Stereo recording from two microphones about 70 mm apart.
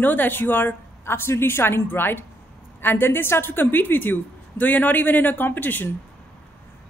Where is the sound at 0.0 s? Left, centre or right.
Left.